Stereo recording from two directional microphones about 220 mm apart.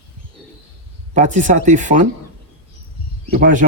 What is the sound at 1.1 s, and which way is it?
Speech, 35° right (ahead or behind).